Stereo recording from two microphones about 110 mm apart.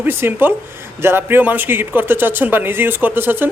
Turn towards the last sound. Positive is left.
turn(degrees=-20)  # may be behind; listen again after turning